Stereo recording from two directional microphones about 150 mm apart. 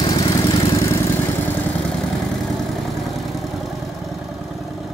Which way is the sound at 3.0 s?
Centre (ahead or behind).